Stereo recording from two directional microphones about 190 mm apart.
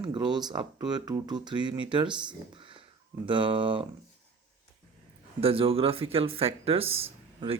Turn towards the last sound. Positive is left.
turn(degrees=-30)  # may be behind; listen again after turning